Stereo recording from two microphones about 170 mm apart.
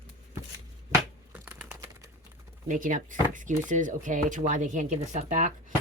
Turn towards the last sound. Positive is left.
turn(degrees=-45)  # may be behind; listen again after turning